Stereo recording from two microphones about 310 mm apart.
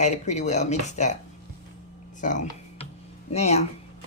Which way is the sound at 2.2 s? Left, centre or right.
Left.